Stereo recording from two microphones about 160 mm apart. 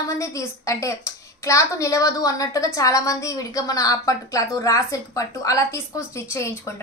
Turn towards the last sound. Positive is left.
turn(degrees=15)  # may be behind; listen again after turning